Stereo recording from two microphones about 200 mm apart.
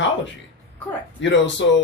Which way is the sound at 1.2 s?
65° left (ahead or behind).